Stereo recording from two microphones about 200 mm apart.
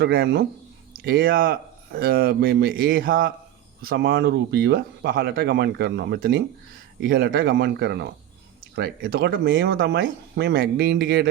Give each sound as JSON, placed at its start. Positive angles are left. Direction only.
{"t": 0.0, "sound": "speech", "side_deg": -50}